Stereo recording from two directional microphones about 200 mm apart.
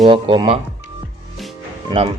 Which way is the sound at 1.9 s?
25° right (ahead or behind).